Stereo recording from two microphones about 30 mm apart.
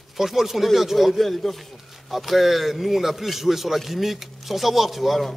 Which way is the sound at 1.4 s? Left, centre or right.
Centre.